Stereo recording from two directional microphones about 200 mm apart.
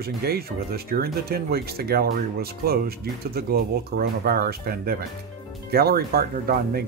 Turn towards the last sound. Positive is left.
turn(degrees=-50)  # may be behind; listen again after turning